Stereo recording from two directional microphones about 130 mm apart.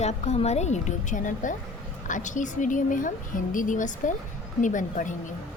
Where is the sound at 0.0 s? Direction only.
55° left (ahead or behind); by 5.1 s 85° left.